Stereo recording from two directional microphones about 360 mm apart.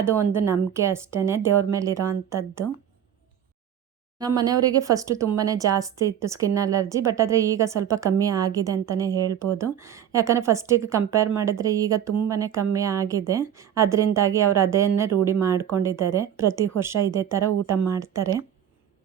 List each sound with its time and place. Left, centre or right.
0.0 s speech: centre
4.2 s speech: centre